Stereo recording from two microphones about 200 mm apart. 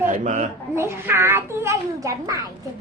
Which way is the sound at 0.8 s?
10° right (ahead or behind).